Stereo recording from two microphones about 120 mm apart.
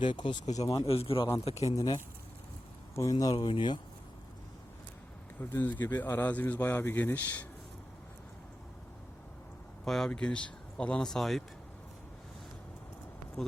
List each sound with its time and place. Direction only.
0.0 s speech: 40° left (ahead or behind)
0.4 s speech: 70° left (ahead or behind)
0.9 s a man's voice: 55° left (ahead or behind)
1.5 s speech: 65° left (ahead or behind)
1.7 s speech: 30° left (ahead or behind)
3.3 s speech: 45° left (ahead or behind)
5.4 s speech: 20° left (ahead or behind)
9.8 s speech: 5° left (ahead or behind)